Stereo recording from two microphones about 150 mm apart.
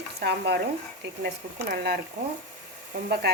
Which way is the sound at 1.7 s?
90° right.